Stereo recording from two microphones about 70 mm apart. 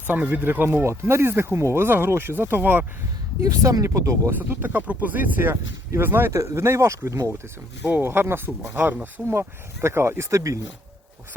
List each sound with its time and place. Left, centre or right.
0.1 s speech: right
3.4 s speech: right
4.3 s speech: right
6.3 s speech: right
7.9 s speech: right
9.2 s speech: right